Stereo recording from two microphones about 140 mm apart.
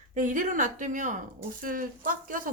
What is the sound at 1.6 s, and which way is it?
Speech, 85° right.